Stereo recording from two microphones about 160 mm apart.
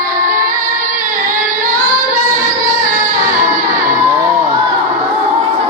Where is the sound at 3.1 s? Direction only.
60° right (ahead or behind).